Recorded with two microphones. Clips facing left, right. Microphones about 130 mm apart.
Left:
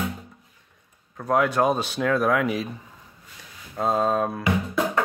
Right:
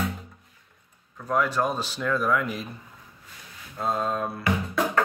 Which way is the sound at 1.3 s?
65° left (ahead or behind).